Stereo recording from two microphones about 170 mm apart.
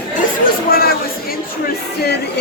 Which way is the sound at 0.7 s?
60° left (ahead or behind).